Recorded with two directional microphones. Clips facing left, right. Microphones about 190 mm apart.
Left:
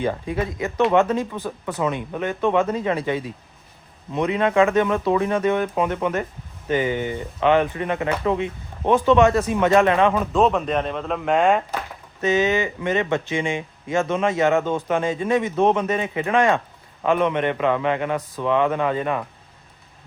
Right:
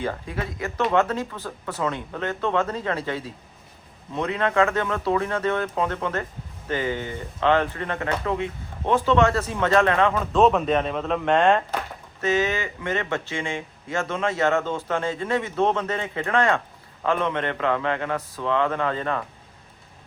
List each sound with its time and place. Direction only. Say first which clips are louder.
0.0 s speech: left 5 dB; 20° left (ahead or behind)
10.3 s speech: even; centre (ahead or behind)
12.2 s speech: left 4 dB; 20° left (ahead or behind)